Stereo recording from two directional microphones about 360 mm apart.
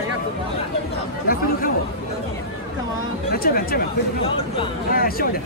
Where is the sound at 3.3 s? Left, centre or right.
Left.